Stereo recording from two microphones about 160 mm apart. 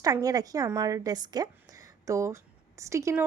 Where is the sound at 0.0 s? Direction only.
25° right (ahead or behind).